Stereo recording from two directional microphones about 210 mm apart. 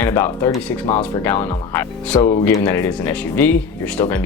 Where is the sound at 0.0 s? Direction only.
10° left (ahead or behind).